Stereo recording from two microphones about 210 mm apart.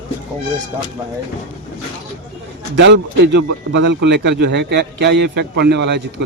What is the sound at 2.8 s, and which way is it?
A man's voice, 55° right (ahead or behind).